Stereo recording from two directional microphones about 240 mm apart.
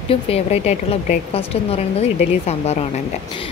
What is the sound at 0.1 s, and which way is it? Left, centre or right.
A woman's voice, left.